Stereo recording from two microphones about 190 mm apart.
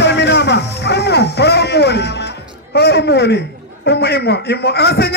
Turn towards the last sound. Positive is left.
turn(degrees=55)  # may be behind; listen again after turning